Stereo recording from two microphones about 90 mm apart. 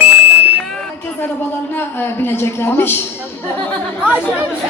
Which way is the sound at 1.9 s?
25° left (ahead or behind).